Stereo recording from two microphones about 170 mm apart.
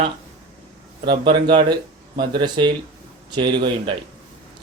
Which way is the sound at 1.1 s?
30° right (ahead or behind).